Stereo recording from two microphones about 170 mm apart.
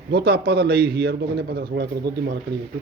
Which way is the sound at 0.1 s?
70° right (ahead or behind).